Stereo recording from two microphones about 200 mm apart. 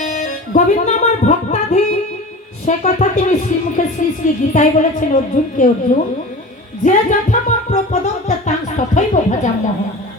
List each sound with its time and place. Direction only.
0.0 s music: 40° left (ahead or behind)
2.6 s speech: 35° left (ahead or behind)